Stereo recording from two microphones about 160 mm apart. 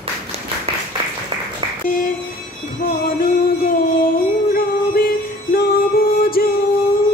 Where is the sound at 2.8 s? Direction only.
65° left (ahead or behind).